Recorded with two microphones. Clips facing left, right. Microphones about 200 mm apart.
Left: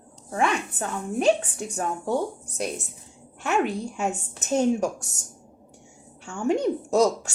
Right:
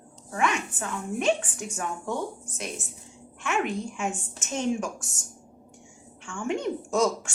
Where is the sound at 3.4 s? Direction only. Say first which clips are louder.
Left 3 dB; 40° left (ahead or behind).